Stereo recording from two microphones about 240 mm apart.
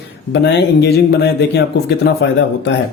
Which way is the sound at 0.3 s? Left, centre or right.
Left.